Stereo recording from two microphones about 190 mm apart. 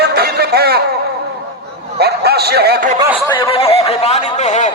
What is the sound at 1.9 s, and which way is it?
Speech, 55° right (ahead or behind).